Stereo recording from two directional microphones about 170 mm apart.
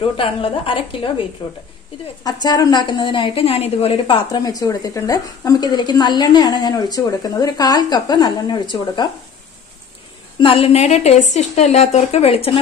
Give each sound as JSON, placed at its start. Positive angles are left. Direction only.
{"t": 0.2, "sound": "a woman's voice", "side_deg": 30}
{"t": 2.4, "sound": "a woman's voice", "side_deg": 25}
{"t": 10.4, "sound": "a woman's voice", "side_deg": 35}